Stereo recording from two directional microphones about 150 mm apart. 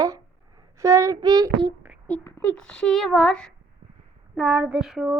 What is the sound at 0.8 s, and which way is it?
Child singing, 20° right (ahead or behind).